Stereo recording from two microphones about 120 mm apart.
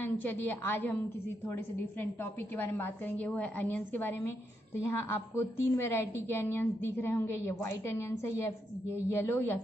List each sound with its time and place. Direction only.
0.0 s a woman's voice: 15° left (ahead or behind)
2.5 s a woman's voice: 15° left (ahead or behind)